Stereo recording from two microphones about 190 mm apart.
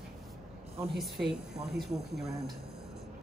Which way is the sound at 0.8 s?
Centre (ahead or behind).